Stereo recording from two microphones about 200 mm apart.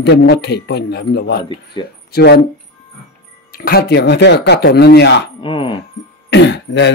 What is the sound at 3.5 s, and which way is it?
Speech, 50° left (ahead or behind).